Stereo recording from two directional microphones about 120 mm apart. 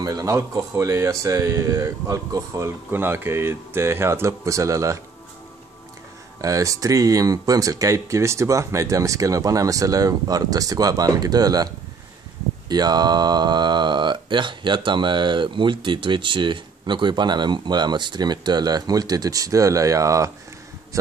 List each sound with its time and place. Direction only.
0.0 s speech: 30° right (ahead or behind)
6.4 s speech: 30° right (ahead or behind)